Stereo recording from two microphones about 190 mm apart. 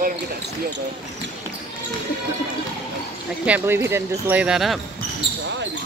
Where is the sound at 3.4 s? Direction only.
10° right (ahead or behind).